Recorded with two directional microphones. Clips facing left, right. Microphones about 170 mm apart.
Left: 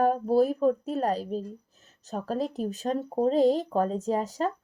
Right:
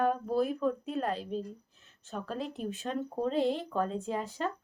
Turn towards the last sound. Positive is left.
turn(degrees=40)  # may be behind; listen again after turning